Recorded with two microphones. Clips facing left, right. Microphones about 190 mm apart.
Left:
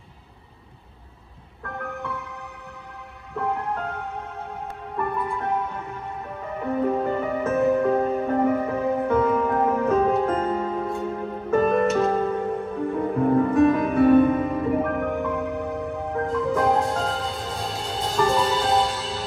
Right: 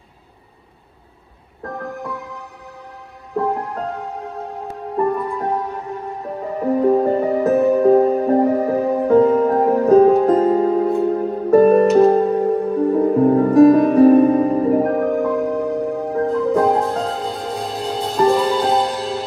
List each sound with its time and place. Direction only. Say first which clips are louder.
1.6 s music: right 5 dB; 35° right (ahead or behind)
17.4 s music: right 6 dB; centre (ahead or behind)
18.9 s music: right 7 dB; 60° right (ahead or behind)